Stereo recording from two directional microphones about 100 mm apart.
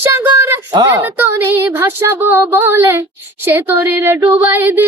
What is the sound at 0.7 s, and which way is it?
Speech, 40° right (ahead or behind).